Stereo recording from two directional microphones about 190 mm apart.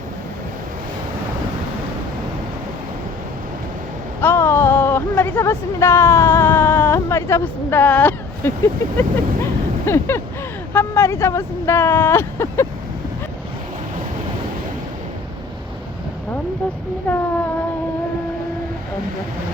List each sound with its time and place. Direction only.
4.2 s a sound: 10° left (ahead or behind)
9.0 s speech: 15° left (ahead or behind)
17.1 s speech: 5° left (ahead or behind)